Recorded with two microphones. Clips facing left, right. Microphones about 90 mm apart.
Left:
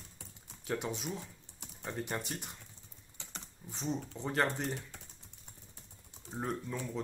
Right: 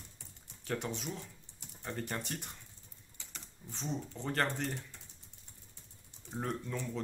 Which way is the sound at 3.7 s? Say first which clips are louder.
Left 2 dB; 5° left (ahead or behind).